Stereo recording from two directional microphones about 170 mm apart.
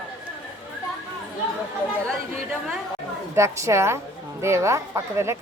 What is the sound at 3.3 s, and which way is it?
Speech, 15° right (ahead or behind).